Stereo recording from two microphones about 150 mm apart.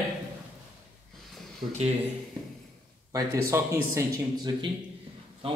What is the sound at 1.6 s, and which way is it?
Speech, 40° right (ahead or behind).